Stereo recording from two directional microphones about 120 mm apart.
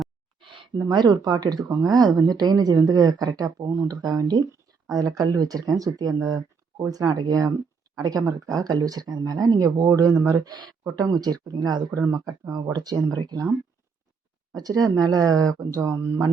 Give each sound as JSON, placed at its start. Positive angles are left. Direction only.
{"t": 0.3, "sound": "a sound", "side_deg": -45}
{"t": 0.9, "sound": "speech", "side_deg": -35}
{"t": 14.5, "sound": "speech", "side_deg": -30}